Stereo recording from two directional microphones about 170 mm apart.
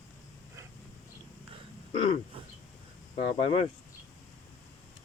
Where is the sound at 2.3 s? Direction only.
35° right (ahead or behind).